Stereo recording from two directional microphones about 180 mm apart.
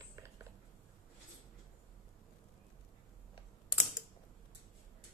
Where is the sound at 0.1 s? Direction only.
15° right (ahead or behind).